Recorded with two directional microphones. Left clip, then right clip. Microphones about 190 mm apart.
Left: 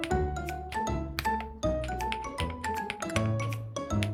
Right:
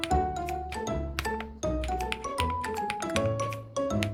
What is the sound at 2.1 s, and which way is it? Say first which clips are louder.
Music: right 3 dB; 15° right (ahead or behind).